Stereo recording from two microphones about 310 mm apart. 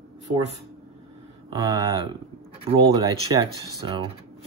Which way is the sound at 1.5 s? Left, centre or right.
Centre.